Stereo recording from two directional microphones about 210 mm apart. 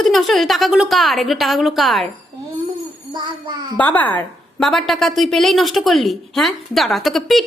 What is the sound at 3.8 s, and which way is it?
A woman's voice, 10° left (ahead or behind).